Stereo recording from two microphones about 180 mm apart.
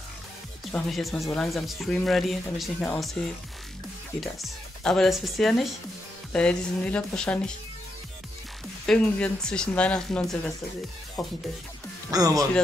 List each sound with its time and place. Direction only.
0.7 s speech: centre (ahead or behind)
4.2 s speech: centre (ahead or behind)
8.8 s speech: 5° left (ahead or behind)
12.1 s speech: 20° right (ahead or behind)